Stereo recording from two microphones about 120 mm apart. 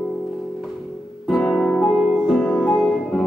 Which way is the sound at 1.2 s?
5° left (ahead or behind).